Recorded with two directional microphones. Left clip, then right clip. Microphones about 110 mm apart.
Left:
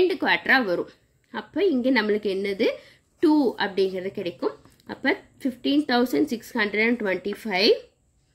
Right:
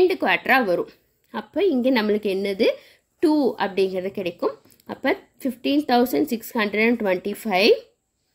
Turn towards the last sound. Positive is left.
turn(degrees=-25)  # may be behind; listen again after turning